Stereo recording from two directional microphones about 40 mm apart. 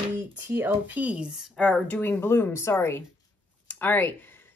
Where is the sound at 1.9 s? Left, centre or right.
Left.